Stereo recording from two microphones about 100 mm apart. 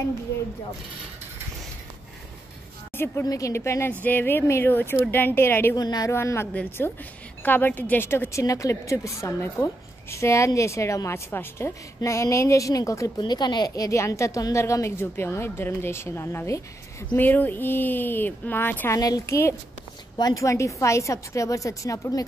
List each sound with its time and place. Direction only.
3.3 s a woman's voice: 35° left (ahead or behind)
5.8 s a woman's voice: 40° left (ahead or behind)
6.1 s a woman's voice: 25° left (ahead or behind)
13.2 s a woman's voice: 45° left (ahead or behind); by 16.6 s 30° left (ahead or behind)
17.1 s a woman's voice: 20° left (ahead or behind)
18.9 s a woman's voice: 40° left (ahead or behind)